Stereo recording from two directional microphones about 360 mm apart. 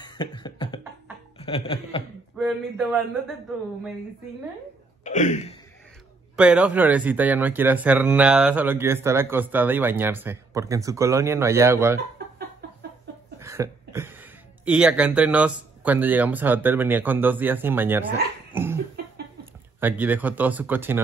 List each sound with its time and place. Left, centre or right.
0.0 s beatboxing: centre
1.4 s speech: centre
2.3 s speech: centre
5.0 s a sound: centre
6.3 s speech: centre
13.4 s speech: centre
18.5 s cough: centre
19.8 s speech: centre